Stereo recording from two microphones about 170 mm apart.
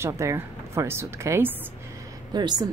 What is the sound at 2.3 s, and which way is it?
Speech, 25° right (ahead or behind).